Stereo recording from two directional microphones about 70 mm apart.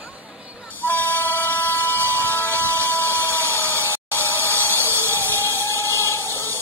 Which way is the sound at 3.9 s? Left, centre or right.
Left.